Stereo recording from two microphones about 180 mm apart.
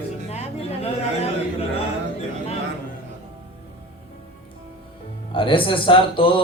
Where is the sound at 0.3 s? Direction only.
35° left (ahead or behind).